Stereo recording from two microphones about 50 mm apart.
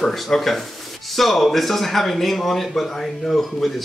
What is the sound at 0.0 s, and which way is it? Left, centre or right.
Speech, centre.